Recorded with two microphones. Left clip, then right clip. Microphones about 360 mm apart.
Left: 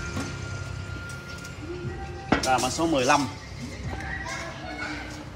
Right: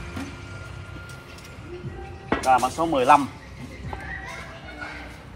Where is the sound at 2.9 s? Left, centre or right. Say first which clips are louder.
Right 6 dB; centre.